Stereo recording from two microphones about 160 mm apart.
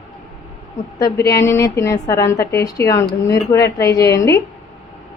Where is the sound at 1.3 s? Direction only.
20° left (ahead or behind).